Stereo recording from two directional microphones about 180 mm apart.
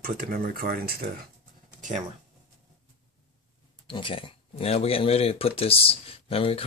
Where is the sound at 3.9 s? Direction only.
30° left (ahead or behind).